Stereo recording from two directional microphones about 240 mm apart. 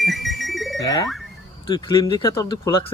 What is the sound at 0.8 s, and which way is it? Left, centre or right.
Speech, centre.